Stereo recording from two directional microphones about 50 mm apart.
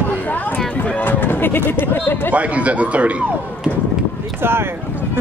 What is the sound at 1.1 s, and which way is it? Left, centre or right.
Speech, left.